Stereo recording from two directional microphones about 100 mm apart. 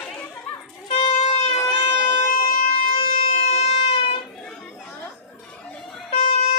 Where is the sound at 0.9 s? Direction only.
85° left.